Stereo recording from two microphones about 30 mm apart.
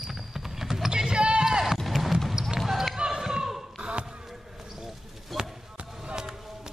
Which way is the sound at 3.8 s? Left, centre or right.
Right.